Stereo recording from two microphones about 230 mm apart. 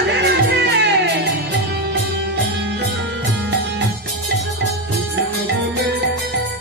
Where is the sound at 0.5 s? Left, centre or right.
Right.